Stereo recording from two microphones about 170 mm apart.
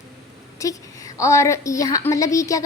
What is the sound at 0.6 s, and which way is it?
A woman's voice, 20° left (ahead or behind).